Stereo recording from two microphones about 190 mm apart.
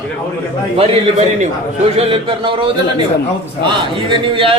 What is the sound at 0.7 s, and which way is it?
A man's voice, 30° right (ahead or behind).